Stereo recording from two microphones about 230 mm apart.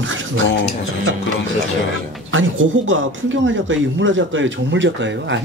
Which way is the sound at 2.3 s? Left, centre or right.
Right.